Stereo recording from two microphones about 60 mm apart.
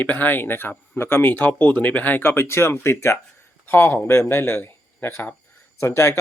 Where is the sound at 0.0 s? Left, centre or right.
Left.